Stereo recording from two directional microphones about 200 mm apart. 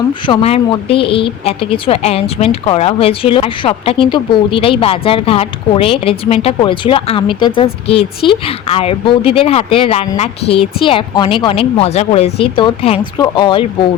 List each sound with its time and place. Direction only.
0.1 s speech: 25° left (ahead or behind)